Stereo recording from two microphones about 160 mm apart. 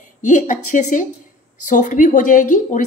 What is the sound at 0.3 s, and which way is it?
A woman's voice, 50° left (ahead or behind).